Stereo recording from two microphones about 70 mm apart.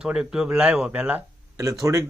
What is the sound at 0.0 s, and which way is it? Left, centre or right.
Speech, centre.